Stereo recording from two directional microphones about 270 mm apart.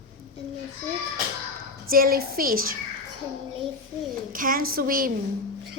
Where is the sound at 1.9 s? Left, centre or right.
Right.